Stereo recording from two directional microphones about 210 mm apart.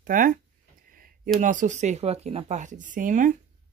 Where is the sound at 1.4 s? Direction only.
35° right (ahead or behind).